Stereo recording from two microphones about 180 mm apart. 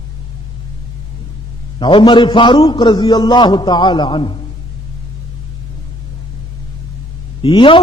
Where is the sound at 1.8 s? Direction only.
25° left (ahead or behind).